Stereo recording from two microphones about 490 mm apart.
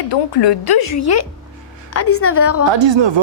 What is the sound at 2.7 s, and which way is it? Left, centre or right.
Speech, right.